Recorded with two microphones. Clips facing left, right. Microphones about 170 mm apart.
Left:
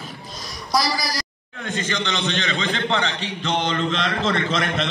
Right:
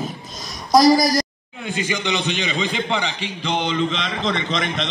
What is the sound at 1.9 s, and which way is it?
A man's voice, 10° right (ahead or behind).